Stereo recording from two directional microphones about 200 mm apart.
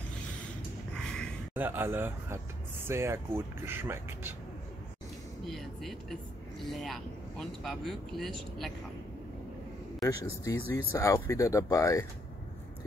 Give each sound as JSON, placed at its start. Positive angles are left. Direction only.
{"t": 0.9, "sound": "gasp", "side_deg": 5}
{"t": 1.5, "sound": "speech", "side_deg": -10}
{"t": 5.4, "sound": "speech", "side_deg": 0}
{"t": 10.0, "sound": "speech", "side_deg": 15}